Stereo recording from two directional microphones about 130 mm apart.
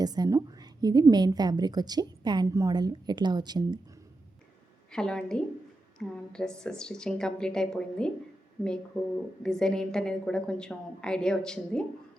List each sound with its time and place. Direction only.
0.0 s a woman's voice: 30° right (ahead or behind)
4.9 s a woman's voice: 5° left (ahead or behind)